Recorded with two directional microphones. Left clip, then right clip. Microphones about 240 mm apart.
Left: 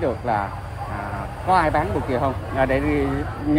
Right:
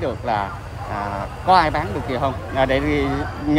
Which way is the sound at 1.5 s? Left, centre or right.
Centre.